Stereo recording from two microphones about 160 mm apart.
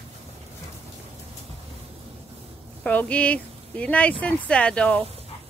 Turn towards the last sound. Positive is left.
turn(degrees=5)  # may be behind; listen again after turning